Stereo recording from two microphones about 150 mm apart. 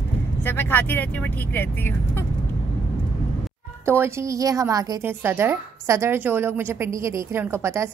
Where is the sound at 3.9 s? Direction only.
15° right (ahead or behind).